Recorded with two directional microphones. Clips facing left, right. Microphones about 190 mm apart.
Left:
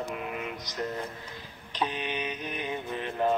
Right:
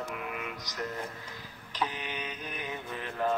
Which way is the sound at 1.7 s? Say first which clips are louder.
Left 4 dB; 25° left (ahead or behind).